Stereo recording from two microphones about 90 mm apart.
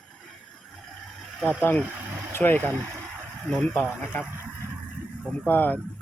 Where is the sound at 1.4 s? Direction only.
20° left (ahead or behind).